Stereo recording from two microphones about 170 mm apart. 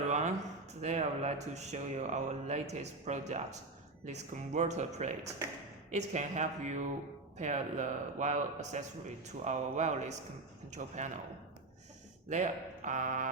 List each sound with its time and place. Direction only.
0.7 s a man's voice: 40° right (ahead or behind)
12.3 s a man's voice: 45° right (ahead or behind)